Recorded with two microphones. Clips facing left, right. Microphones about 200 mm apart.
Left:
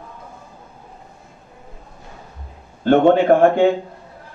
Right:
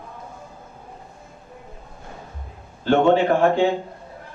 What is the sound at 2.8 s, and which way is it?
Speech, 55° left (ahead or behind).